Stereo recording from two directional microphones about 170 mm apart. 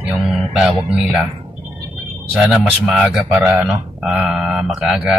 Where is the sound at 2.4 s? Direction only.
Centre (ahead or behind).